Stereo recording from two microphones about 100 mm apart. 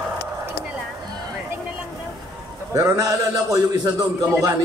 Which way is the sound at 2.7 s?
30° right (ahead or behind).